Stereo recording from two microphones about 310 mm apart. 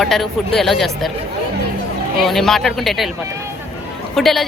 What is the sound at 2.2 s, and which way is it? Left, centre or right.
Speech, centre.